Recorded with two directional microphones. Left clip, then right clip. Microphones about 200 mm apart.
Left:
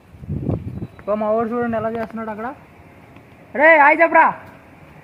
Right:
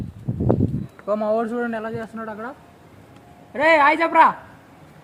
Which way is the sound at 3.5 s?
30° left (ahead or behind).